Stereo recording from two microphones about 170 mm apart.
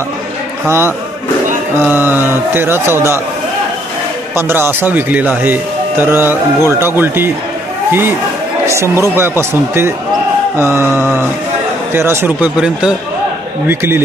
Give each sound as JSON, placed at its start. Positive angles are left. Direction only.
{"t": 0.7, "sound": "speech", "side_deg": -15}
{"t": 4.4, "sound": "speech", "side_deg": -15}
{"t": 8.6, "sound": "speech", "side_deg": -15}